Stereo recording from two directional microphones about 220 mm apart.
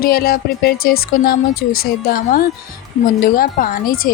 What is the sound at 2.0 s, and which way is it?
Speech, 40° left (ahead or behind).